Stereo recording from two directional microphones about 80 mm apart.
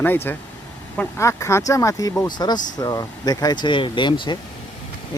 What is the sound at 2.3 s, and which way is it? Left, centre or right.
Speech, left.